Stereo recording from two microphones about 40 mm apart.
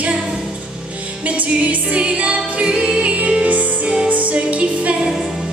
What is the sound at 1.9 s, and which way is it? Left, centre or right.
Music, right.